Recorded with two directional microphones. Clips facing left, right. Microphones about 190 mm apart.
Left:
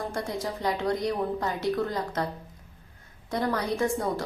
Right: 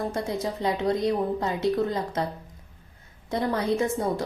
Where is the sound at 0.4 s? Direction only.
20° right (ahead or behind).